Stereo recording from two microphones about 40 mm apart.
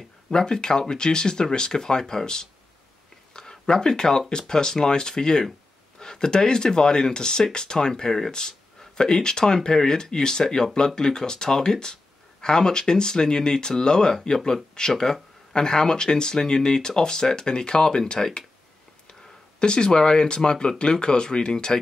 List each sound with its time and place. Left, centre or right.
0.3 s speech: centre
19.6 s speech: left